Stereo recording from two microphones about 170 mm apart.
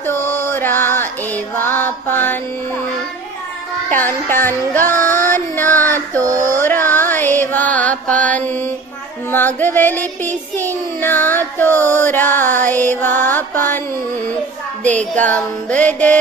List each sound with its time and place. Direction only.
0.0 s music: 15° left (ahead or behind)
4.3 s child singing: 10° left (ahead or behind)
4.9 s music: 50° right (ahead or behind)
5.3 s music: 10° left (ahead or behind)
6.3 s music: 50° right (ahead or behind)
6.6 s mantra: 10° left (ahead or behind)
9.3 s child singing: 10° left (ahead or behind)
15.0 s child singing: 10° left (ahead or behind)